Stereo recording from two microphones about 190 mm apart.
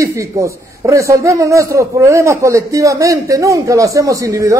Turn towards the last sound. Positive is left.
turn(degrees=-15)  # may be behind; listen again after turning